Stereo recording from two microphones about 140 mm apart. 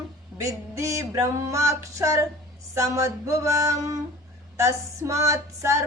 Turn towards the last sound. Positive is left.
turn(degrees=-20)  # may be behind; listen again after turning